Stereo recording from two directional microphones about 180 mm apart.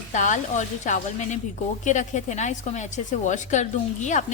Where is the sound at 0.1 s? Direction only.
45° left (ahead or behind).